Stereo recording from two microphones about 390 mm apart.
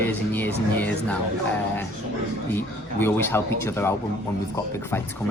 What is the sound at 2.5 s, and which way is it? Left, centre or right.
Speech, centre.